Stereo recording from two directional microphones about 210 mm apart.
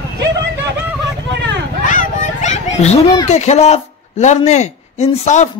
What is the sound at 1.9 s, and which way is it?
Children playing, 35° left (ahead or behind).